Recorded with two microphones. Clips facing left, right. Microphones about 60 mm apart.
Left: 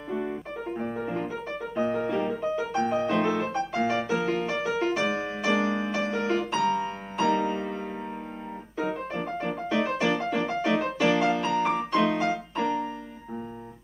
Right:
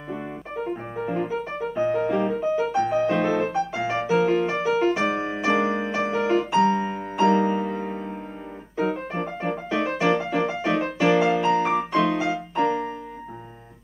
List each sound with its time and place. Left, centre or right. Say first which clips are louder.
0.7 s piano: left 1 dB; centre
4.2 s music: right 6 dB; centre
12.5 s music: right 8 dB; right